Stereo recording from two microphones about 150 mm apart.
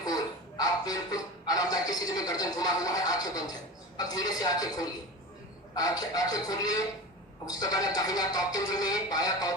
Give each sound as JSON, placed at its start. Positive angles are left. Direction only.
{"t": 0.0, "sound": "speech", "side_deg": 25}